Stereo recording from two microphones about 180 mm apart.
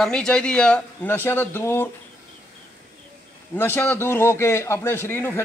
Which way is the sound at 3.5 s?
15° left (ahead or behind).